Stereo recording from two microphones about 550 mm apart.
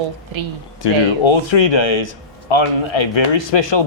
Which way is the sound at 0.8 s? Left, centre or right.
Left.